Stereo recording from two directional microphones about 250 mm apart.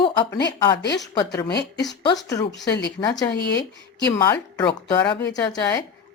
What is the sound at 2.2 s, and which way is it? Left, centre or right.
Speech, centre.